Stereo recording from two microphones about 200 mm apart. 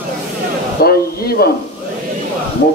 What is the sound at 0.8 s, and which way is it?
Speech, 50° left (ahead or behind).